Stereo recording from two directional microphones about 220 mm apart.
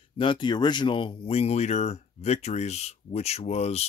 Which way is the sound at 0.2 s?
20° left (ahead or behind).